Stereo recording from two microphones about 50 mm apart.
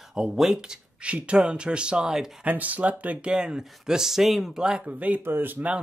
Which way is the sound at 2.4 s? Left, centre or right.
Right.